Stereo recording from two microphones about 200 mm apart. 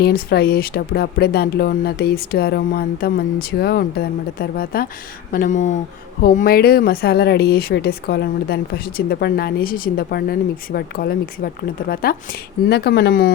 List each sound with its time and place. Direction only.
0.0 s speech: 50° left (ahead or behind)